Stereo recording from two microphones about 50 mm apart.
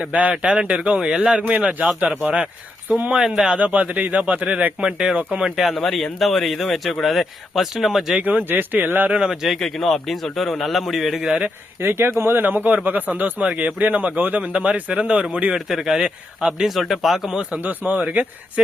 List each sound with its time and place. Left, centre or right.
0.0 s speech: right
3.2 s a man's voice: centre
3.5 s speech: right
4.9 s a man's voice: centre
5.7 s speech: centre
8.2 s speech: right
9.2 s a man's voice: centre
9.6 s speech: centre
11.8 s speech: right
13.4 s speech: right
15.5 s a man's voice: centre
17.6 s speech: right